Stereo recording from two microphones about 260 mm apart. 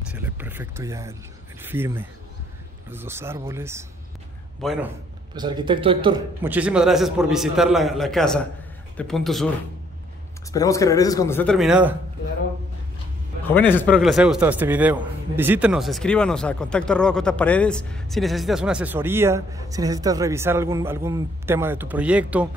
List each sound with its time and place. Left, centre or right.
0.1 s speech: centre
4.6 s a man's voice: centre
5.3 s a man's voice: centre
6.4 s a man's voice: centre
10.5 s speech: centre
13.5 s a man's voice: centre